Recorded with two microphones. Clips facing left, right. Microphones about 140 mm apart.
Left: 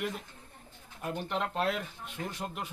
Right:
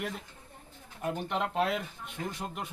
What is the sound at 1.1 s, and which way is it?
Speech, centre (ahead or behind).